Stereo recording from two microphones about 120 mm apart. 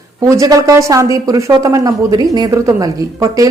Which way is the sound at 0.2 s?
30° right (ahead or behind).